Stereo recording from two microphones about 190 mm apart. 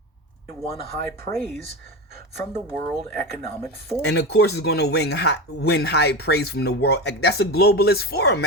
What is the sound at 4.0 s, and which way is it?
Speech, 60° left (ahead or behind).